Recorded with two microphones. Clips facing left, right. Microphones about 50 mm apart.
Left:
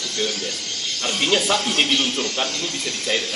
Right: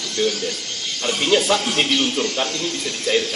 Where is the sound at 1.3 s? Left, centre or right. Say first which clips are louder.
Right 3 dB; centre.